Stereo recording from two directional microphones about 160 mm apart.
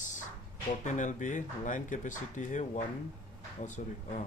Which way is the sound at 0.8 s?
50° left (ahead or behind).